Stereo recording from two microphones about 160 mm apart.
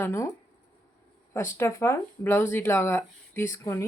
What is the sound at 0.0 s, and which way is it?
Speech, 15° left (ahead or behind).